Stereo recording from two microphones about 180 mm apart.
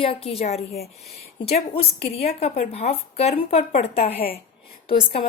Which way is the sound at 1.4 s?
35° left (ahead or behind).